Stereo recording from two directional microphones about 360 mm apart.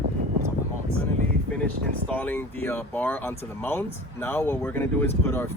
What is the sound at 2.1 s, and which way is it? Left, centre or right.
Speech, centre.